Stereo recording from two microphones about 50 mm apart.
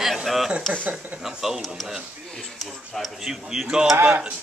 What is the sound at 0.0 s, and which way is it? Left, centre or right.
A man's voice, centre.